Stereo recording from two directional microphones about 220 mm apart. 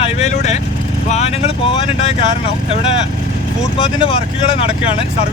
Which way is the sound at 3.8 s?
25° left (ahead or behind).